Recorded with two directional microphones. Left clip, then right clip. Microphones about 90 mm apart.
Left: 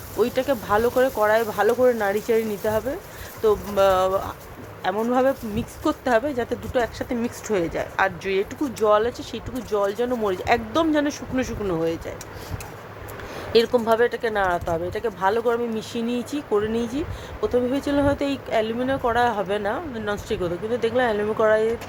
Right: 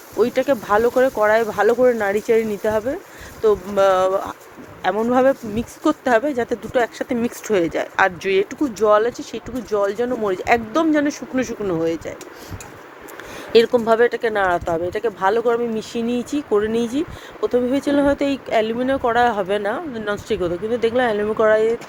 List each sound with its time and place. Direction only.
0.2 s speech: 45° right (ahead or behind); by 8.4 s 75° right (ahead or behind)
8.8 s speech: 40° right (ahead or behind)
13.8 s speech: 50° right (ahead or behind)
16.7 s speech: 90° right
17.4 s speech: 45° right (ahead or behind)
19.9 s speech: 35° right (ahead or behind)